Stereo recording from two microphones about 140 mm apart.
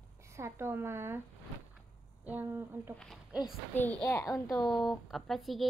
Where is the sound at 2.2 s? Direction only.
15° right (ahead or behind).